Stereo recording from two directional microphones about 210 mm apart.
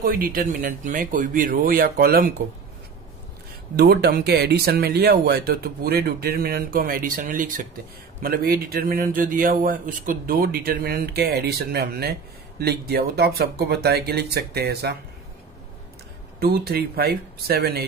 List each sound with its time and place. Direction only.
0.0 s speech: 45° right (ahead or behind)
3.7 s speech: 50° right (ahead or behind)
16.3 s speech: 50° right (ahead or behind)